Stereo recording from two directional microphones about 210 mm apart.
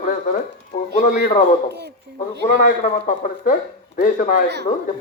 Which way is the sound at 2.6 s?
40° left (ahead or behind).